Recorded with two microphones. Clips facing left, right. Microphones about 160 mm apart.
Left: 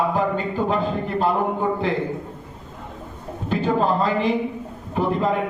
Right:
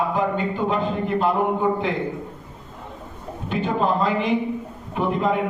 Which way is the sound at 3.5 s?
35° left (ahead or behind).